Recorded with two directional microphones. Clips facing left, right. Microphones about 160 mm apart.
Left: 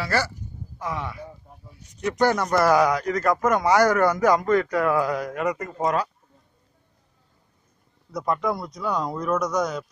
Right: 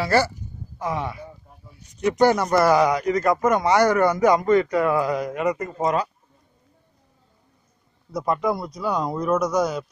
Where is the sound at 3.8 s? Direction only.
10° right (ahead or behind).